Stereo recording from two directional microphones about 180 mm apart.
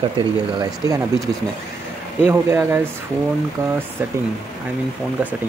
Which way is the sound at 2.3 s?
15° right (ahead or behind).